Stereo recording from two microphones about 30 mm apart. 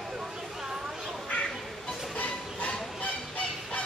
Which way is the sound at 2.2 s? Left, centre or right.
Left.